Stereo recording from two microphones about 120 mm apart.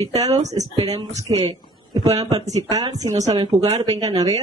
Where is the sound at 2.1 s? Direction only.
35° right (ahead or behind).